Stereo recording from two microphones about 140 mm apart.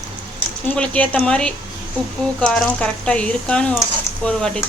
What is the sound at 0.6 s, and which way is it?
Speech, 10° left (ahead or behind).